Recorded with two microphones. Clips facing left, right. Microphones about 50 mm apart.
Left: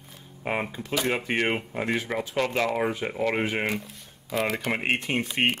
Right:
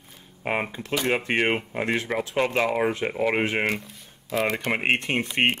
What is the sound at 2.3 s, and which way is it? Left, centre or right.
Speech, centre.